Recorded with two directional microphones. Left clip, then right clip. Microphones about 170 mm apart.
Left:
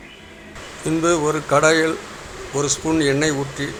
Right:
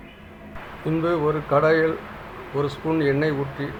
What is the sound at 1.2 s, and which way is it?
Speech, 25° left (ahead or behind).